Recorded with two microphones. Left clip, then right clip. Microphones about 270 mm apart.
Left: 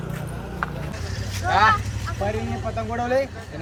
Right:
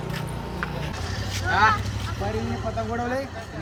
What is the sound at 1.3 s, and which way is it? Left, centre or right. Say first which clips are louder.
Vehicle: left 2 dB; centre.